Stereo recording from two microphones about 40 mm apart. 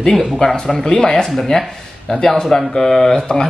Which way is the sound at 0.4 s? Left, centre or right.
Left.